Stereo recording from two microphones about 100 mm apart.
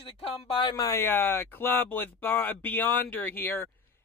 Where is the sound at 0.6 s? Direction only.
40° left (ahead or behind).